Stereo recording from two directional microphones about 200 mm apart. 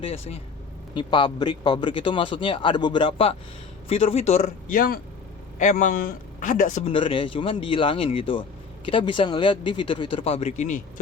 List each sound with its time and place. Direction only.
0.0 s a man's voice: 30° left (ahead or behind)